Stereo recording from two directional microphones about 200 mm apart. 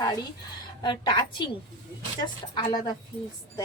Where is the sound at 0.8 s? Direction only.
25° left (ahead or behind).